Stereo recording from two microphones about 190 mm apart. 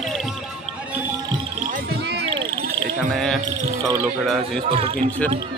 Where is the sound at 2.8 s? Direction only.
Centre (ahead or behind).